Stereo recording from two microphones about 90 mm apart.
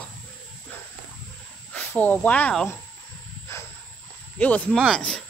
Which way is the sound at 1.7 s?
20° left (ahead or behind).